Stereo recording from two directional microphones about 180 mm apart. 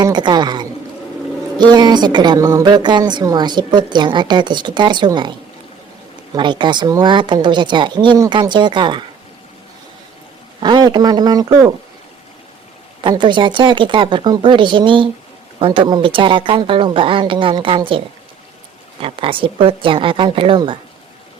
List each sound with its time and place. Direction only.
0.0 s a man's voice: 25° right (ahead or behind)
6.3 s a woman's voice: 25° right (ahead or behind)
10.6 s a woman's voice: 25° right (ahead or behind)
13.0 s a woman's voice: 25° right (ahead or behind)
19.0 s a woman's voice: 30° right (ahead or behind)